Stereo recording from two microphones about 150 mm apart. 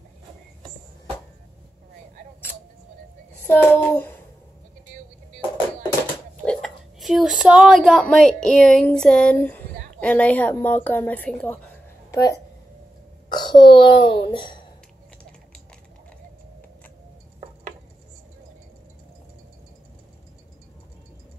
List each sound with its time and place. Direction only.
3.4 s child singing: 10° left (ahead or behind)
6.4 s speech: 5° left (ahead or behind)
12.1 s a child's voice: 20° left (ahead or behind)